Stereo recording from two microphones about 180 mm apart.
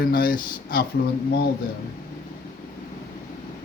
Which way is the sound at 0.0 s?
55° left (ahead or behind).